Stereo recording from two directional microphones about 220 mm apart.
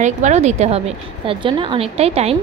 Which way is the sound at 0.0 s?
30° right (ahead or behind).